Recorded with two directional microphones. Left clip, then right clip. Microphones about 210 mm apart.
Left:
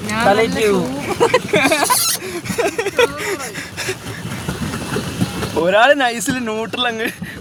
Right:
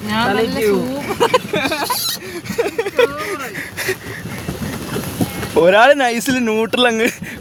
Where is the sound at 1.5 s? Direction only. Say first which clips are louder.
Left 4 dB; 5° left (ahead or behind).